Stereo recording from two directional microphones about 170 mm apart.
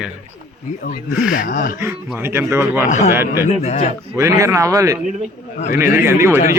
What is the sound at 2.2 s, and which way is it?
A man's voice, 15° right (ahead or behind).